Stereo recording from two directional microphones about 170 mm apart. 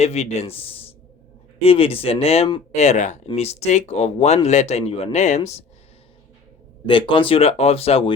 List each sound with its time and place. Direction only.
0.0 s speech: 40° left (ahead or behind)
6.8 s speech: 30° left (ahead or behind)